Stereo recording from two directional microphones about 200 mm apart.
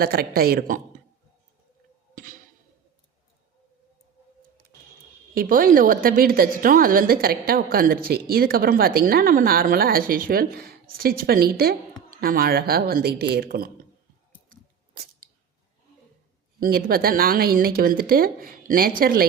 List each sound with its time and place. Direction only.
0.0 s a woman's voice: 50° right (ahead or behind)
2.1 s a sound: 40° right (ahead or behind)
5.3 s a woman's voice: 45° right (ahead or behind)
14.5 s chewing: 45° right (ahead or behind)
16.6 s a woman's voice: 50° right (ahead or behind)